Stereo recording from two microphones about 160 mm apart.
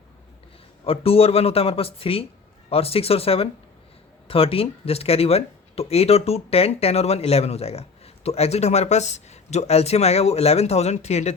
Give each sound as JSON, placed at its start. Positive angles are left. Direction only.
{"t": 0.9, "sound": "speech", "side_deg": 35}